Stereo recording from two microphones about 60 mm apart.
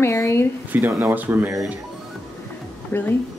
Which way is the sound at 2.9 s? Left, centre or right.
Left.